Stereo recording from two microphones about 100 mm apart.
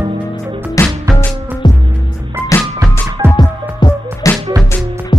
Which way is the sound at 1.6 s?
50° left (ahead or behind).